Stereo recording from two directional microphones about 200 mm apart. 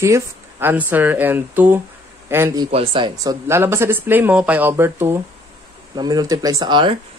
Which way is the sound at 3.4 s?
10° right (ahead or behind).